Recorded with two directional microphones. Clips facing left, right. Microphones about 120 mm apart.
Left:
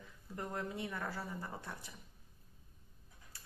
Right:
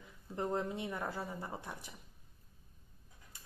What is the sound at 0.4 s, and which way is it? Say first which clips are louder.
A woman's voice: right 5 dB; 25° right (ahead or behind).